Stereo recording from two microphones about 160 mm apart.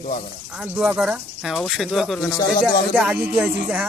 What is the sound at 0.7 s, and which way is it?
Speech, 5° right (ahead or behind).